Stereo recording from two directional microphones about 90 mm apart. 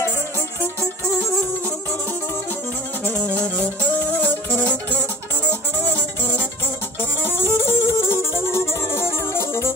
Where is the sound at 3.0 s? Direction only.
20° left (ahead or behind).